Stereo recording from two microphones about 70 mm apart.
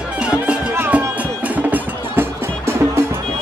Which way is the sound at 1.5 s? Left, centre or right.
Right.